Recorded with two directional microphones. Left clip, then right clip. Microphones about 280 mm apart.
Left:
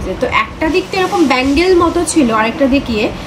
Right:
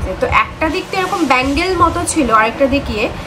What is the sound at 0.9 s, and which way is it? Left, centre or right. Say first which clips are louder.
A woman's voice: even; right.